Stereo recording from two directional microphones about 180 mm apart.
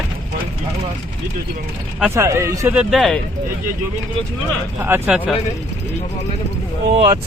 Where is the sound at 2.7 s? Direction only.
Centre (ahead or behind).